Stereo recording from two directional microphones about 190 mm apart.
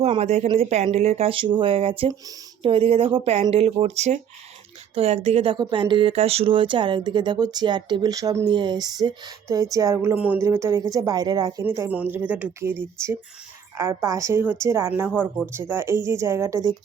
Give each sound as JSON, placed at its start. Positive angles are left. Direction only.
{"t": 0.0, "sound": "speech", "side_deg": -35}